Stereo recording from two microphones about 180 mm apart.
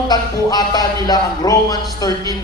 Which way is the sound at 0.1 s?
20° left (ahead or behind).